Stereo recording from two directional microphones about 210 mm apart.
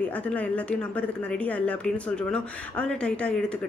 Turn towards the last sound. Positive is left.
turn(degrees=5)  # may be behind; listen again after turning